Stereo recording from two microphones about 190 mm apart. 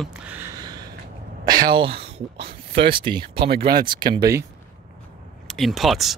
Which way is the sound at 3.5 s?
50° right (ahead or behind).